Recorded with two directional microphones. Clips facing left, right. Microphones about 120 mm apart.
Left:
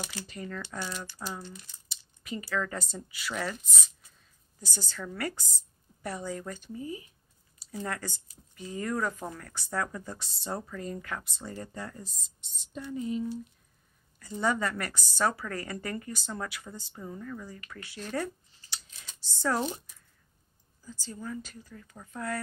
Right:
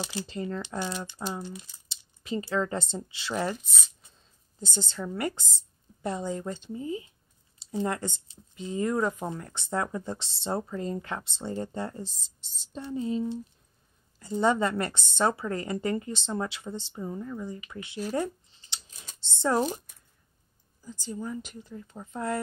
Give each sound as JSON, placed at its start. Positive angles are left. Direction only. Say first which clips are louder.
{"t": 0.0, "sound": "speech", "louder": "right 6 dB", "side_deg": -25}
{"t": 3.6, "sound": "speech", "louder": "even", "side_deg": 0}
{"t": 4.6, "sound": "speech", "louder": "right 6 dB", "side_deg": -25}
{"t": 18.1, "sound": "a sound", "louder": "right 2 dB", "side_deg": -20}
{"t": 19.1, "sound": "speech", "louder": "right 4 dB", "side_deg": -25}
{"t": 20.8, "sound": "speech", "louder": "right 4 dB", "side_deg": -20}